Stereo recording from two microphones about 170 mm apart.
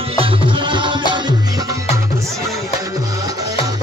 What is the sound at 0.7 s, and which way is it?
Music, 30° right (ahead or behind).